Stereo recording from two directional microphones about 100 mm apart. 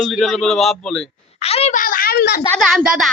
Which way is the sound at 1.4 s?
90° left.